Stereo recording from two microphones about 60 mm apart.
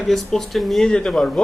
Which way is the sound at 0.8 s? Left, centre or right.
Centre.